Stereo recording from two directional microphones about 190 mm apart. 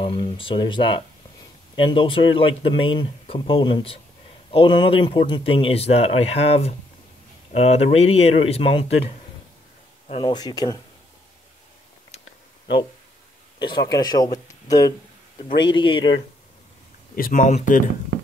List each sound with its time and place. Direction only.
0.0 s speech: 30° left (ahead or behind)
13.6 s speech: 25° left (ahead or behind)
17.1 s speech: 45° left (ahead or behind)